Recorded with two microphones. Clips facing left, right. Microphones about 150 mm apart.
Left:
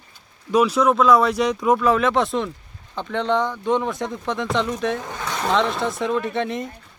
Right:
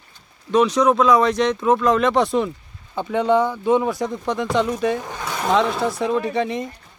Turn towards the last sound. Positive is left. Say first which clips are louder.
# right 2 dB
turn(degrees=0)  # may be behind; listen again after turning